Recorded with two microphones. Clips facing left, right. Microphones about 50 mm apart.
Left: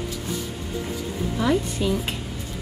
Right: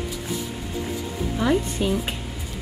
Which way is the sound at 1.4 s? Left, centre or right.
Centre.